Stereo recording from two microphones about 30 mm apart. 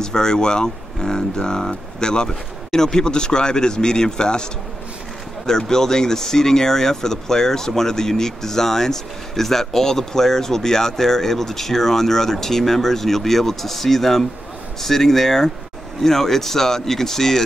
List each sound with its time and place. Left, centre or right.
0.0 s speech: left
5.5 s speech: centre